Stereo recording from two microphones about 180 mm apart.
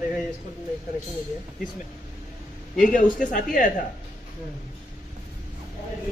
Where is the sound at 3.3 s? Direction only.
50° left (ahead or behind).